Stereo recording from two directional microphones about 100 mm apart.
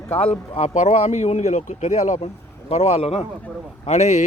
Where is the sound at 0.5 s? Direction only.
90° left.